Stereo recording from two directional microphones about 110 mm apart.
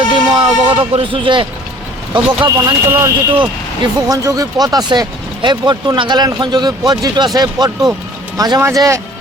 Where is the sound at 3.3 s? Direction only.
50° right (ahead or behind).